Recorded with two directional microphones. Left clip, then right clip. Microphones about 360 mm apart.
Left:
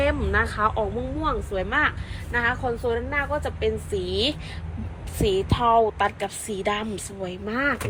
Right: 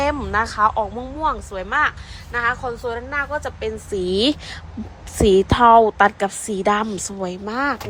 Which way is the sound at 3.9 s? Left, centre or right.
Centre.